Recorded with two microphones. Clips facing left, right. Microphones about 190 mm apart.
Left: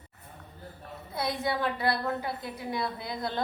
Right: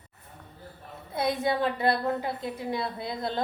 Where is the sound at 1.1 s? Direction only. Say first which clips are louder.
Right 4 dB; 20° right (ahead or behind).